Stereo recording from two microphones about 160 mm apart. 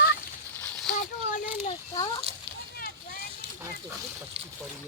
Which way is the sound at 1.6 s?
30° left (ahead or behind).